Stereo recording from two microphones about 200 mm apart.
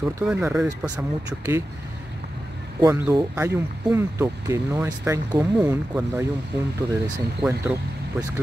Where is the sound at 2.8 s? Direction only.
15° right (ahead or behind).